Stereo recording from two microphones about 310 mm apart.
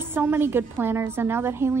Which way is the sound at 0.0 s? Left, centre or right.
Centre.